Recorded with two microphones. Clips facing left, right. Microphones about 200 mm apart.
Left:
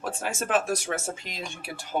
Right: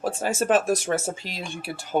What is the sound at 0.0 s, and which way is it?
Speech, 35° right (ahead or behind).